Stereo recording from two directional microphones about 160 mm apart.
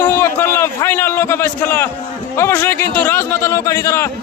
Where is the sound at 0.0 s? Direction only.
15° left (ahead or behind).